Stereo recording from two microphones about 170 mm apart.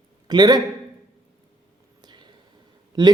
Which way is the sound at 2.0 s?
25° right (ahead or behind).